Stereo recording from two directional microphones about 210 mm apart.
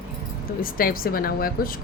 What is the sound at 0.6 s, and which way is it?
Speech, 45° left (ahead or behind).